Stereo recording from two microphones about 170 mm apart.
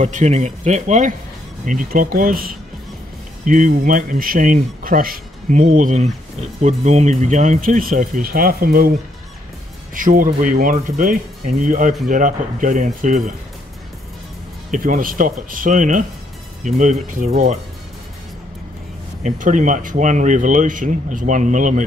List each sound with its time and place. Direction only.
0.0 s speech: 40° right (ahead or behind); by 8.9 s 60° right (ahead or behind)
9.9 s speech: 50° right (ahead or behind)
14.7 s speech: 55° right (ahead or behind)
19.2 s speech: 50° right (ahead or behind)